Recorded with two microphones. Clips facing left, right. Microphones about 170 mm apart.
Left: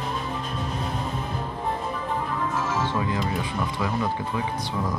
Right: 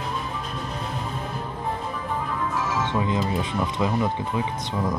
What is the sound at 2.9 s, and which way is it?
Music, 20° right (ahead or behind).